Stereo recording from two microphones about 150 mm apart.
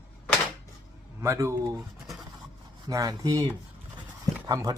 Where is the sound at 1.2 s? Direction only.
20° right (ahead or behind).